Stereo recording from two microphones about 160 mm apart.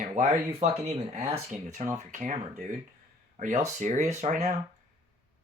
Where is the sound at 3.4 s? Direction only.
50° right (ahead or behind).